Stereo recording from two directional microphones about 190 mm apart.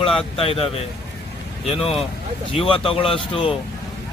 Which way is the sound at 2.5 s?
30° left (ahead or behind).